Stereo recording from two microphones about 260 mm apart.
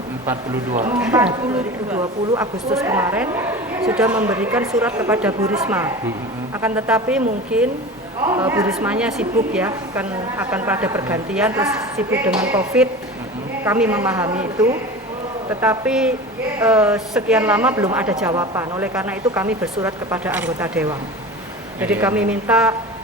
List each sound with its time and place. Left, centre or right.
0.7 s speech: right
0.9 s a woman's voice: centre
8.2 s a woman's voice: centre